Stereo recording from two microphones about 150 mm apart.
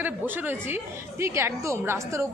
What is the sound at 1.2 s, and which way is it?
A woman's voice, 15° right (ahead or behind).